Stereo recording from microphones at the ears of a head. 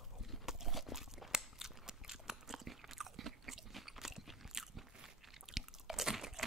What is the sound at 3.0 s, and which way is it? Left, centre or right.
Biting, right.